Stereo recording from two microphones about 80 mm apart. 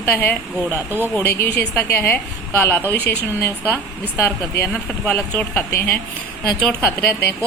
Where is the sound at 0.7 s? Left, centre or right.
Right.